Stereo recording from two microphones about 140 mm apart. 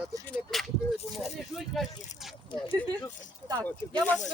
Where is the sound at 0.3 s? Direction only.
5° left (ahead or behind).